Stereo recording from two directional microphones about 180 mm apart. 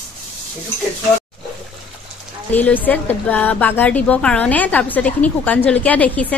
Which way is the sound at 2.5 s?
10° left (ahead or behind).